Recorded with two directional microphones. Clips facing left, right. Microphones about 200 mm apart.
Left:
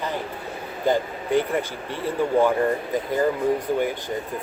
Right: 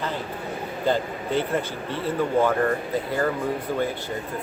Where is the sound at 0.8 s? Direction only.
15° left (ahead or behind).